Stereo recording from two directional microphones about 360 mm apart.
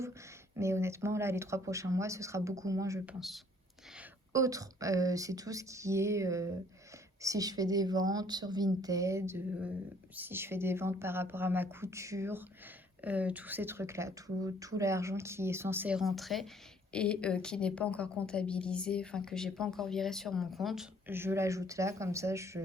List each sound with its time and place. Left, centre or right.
0.5 s a woman's voice: centre